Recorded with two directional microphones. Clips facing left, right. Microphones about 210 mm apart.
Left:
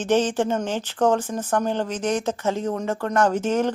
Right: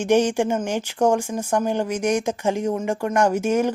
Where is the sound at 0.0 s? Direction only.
10° right (ahead or behind).